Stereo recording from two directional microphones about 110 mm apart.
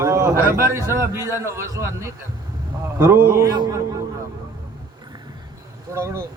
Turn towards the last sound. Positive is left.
turn(degrees=-25)  # may be behind; listen again after turning